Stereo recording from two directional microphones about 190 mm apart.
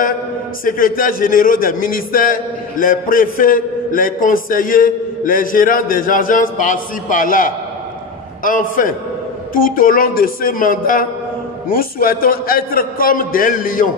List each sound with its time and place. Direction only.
0.7 s speech: 45° left (ahead or behind)